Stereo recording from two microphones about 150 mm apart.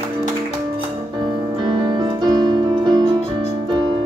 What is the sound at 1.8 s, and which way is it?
Music, 30° right (ahead or behind).